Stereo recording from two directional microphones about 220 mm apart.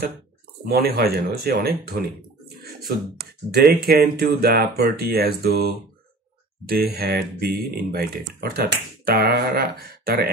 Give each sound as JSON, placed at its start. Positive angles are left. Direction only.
{"t": 0.7, "sound": "speech", "side_deg": -45}
{"t": 3.2, "sound": "speech", "side_deg": -45}
{"t": 6.7, "sound": "speech", "side_deg": -45}